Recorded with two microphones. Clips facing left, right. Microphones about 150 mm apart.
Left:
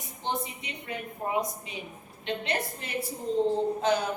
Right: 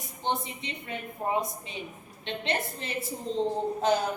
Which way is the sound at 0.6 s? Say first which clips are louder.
Even; 25° right (ahead or behind).